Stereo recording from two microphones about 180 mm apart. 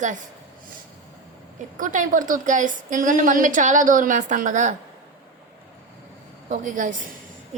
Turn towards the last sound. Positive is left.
turn(degrees=-45)  # may be behind; listen again after turning